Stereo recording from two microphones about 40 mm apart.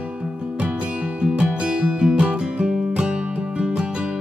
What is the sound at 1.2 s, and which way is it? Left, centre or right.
Music, right.